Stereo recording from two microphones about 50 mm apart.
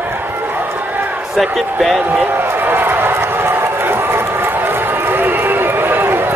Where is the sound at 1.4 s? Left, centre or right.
Centre.